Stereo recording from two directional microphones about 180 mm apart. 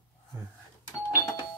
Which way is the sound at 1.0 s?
20° left (ahead or behind).